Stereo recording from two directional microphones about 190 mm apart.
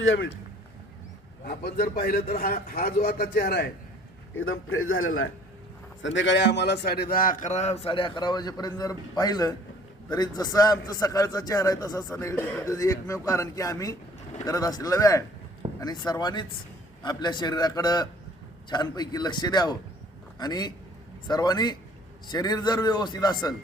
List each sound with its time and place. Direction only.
0.0 s a man's voice: 90° left
1.5 s a man's voice: 55° left (ahead or behind)
4.4 s a man's voice: 90° left
6.0 s a man's voice: 75° left (ahead or behind); by 23.6 s 20° left (ahead or behind)